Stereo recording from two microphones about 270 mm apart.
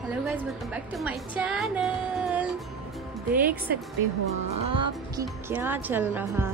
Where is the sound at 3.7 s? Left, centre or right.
Right.